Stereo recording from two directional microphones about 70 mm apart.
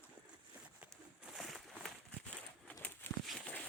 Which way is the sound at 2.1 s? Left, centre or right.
Centre.